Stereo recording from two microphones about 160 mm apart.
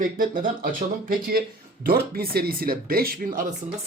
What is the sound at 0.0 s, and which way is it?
Speech, 60° right (ahead or behind).